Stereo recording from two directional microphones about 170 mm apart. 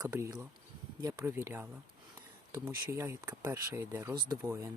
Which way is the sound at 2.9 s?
15° right (ahead or behind).